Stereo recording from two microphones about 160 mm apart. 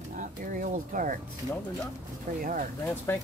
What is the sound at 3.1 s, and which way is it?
Speech, 15° left (ahead or behind).